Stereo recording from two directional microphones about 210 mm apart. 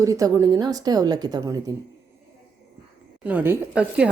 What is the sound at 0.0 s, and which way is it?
Speech, 15° right (ahead or behind).